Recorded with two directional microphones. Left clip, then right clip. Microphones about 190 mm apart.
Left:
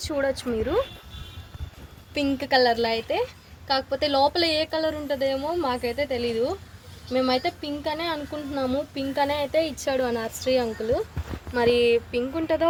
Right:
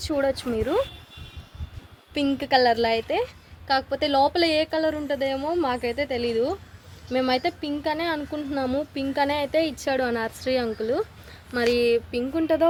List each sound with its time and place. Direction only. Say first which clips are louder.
0.0 s speech: right 1 dB; 60° right (ahead or behind)
2.1 s a woman's voice: even; 30° right (ahead or behind)